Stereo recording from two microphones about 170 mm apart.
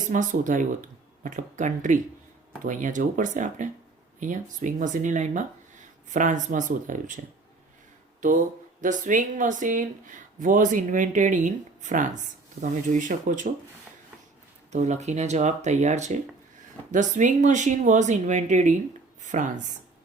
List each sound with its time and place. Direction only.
0.1 s speech: 50° right (ahead or behind)
8.2 s speech: 45° right (ahead or behind)
12.6 s speech: 70° right (ahead or behind)
12.9 s speech: 45° right (ahead or behind)
14.7 s speech: 45° right (ahead or behind)